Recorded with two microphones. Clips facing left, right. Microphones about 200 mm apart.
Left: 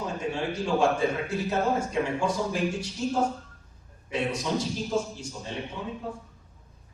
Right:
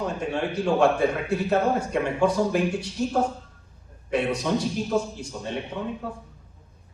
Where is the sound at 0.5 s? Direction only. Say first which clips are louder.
Right 4 dB; 60° right (ahead or behind).